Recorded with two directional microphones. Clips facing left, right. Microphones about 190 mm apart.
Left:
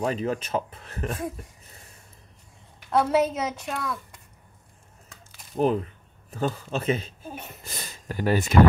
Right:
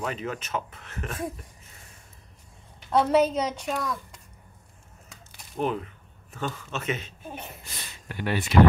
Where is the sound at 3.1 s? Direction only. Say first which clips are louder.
Right 1 dB; 5° left (ahead or behind).